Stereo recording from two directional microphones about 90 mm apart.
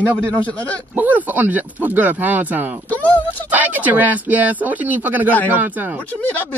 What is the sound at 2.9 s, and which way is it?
Speech, 20° left (ahead or behind).